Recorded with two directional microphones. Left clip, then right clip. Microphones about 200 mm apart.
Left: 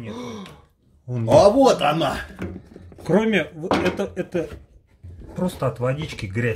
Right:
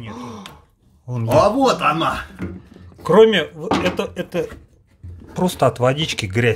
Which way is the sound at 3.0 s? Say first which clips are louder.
Right 8 dB; 35° right (ahead or behind).